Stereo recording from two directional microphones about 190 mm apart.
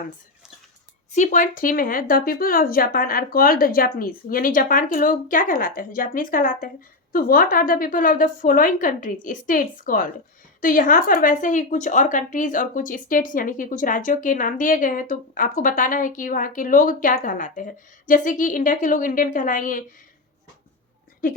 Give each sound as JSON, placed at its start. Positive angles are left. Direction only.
{"t": 1.1, "sound": "speech", "side_deg": 40}